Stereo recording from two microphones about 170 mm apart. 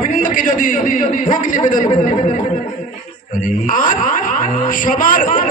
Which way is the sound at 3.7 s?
50° left (ahead or behind).